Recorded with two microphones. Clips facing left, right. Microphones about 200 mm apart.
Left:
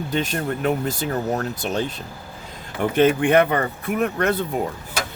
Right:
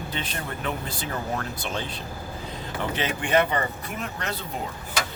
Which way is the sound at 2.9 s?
55° left (ahead or behind).